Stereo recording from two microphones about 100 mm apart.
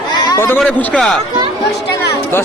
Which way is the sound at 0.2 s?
35° left (ahead or behind).